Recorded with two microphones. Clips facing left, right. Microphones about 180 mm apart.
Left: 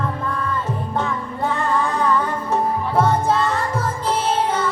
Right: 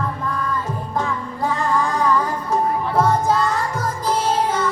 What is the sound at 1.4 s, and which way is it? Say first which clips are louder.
Music: right 1 dB; 30° left (ahead or behind).